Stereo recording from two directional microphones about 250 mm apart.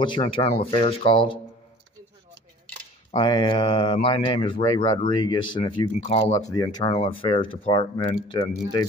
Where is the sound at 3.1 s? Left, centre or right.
Centre.